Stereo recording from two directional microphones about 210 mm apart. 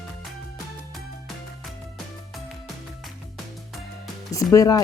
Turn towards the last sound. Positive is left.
turn(degrees=15)  # may be behind; listen again after turning